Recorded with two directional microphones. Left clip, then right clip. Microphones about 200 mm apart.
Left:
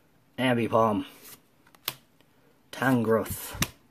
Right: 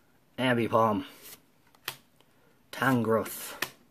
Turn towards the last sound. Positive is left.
turn(degrees=0)  # may be behind; listen again after turning